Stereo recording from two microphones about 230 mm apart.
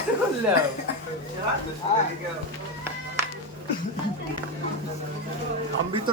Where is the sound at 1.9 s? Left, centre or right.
Left.